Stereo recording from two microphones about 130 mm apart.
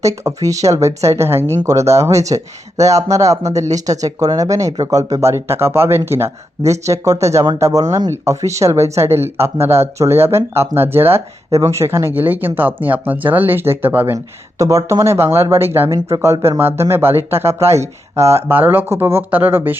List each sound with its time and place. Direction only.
0.0 s speech: 25° right (ahead or behind)